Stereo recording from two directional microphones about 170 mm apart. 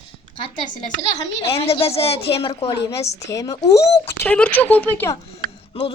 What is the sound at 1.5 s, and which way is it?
A woman's voice, 35° left (ahead or behind).